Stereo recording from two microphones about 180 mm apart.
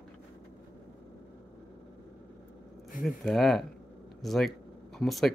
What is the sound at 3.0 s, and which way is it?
Speech, centre (ahead or behind).